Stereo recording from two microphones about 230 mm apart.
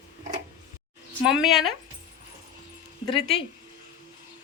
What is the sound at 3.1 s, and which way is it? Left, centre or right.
Speech, left.